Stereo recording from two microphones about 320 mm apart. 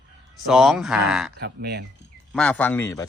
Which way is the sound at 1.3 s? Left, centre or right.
Right.